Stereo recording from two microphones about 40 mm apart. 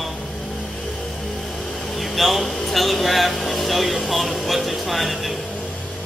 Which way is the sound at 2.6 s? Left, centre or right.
Centre.